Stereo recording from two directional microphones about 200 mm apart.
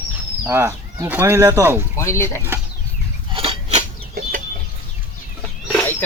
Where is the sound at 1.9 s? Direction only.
15° left (ahead or behind).